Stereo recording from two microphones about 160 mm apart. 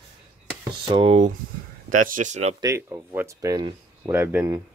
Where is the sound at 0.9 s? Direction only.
35° right (ahead or behind).